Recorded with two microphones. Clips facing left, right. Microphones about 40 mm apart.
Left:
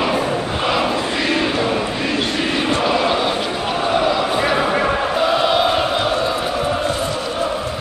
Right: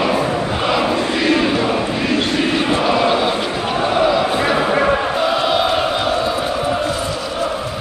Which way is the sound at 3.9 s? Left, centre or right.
Centre.